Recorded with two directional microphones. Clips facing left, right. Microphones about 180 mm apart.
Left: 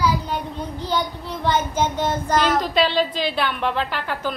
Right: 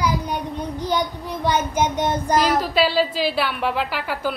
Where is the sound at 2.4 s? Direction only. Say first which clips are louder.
Even; 5° right (ahead or behind).